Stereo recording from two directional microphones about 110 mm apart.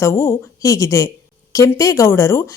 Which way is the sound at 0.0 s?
25° left (ahead or behind).